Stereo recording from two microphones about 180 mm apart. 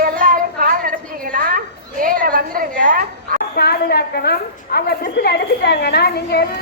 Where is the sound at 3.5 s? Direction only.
60° left (ahead or behind).